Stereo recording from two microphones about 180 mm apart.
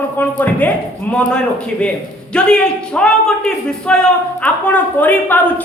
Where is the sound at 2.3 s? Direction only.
5° left (ahead or behind).